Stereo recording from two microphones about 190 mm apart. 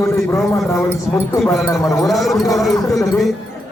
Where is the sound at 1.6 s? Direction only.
15° left (ahead or behind).